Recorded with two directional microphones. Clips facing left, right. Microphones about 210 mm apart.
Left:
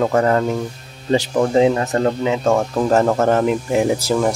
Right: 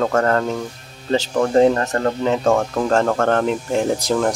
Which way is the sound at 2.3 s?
Centre (ahead or behind).